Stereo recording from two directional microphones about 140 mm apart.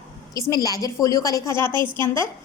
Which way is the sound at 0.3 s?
25° left (ahead or behind).